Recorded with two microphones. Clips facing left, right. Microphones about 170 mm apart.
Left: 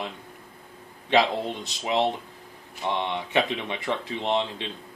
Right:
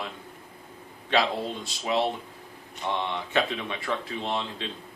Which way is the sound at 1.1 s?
20° left (ahead or behind).